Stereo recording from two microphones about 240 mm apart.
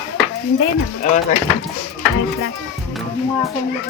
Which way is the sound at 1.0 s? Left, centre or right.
Left.